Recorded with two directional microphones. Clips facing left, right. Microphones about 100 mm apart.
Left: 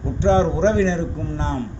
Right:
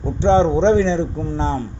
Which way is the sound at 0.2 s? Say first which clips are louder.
Right 3 dB; 30° right (ahead or behind).